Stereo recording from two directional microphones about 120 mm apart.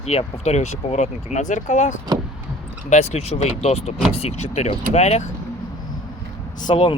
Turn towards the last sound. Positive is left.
turn(degrees=45)  # may be behind; listen again after turning